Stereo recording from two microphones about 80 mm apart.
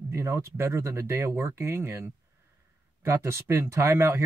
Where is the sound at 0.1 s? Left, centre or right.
Right.